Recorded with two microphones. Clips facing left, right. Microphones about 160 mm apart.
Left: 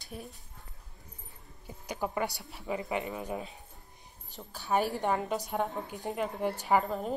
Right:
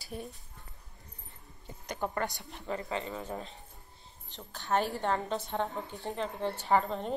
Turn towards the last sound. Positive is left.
turn(degrees=5)  # may be behind; listen again after turning